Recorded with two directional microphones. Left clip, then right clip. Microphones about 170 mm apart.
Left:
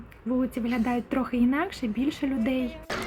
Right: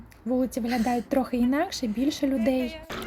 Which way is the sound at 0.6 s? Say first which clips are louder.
Right 2 dB; centre (ahead or behind).